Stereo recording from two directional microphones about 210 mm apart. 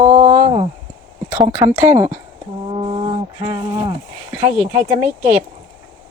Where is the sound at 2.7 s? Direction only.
25° right (ahead or behind).